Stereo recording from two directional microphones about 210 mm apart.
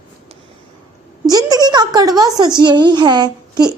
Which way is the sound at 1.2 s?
20° right (ahead or behind).